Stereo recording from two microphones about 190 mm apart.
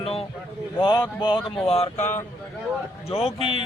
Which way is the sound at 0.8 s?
20° left (ahead or behind).